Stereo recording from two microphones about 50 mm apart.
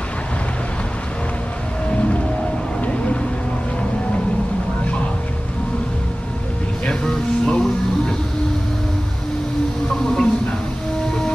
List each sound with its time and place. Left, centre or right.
1.9 s whale vocalization: left
2.8 s vehicle: left
6.9 s music: centre
10.0 s a sound: centre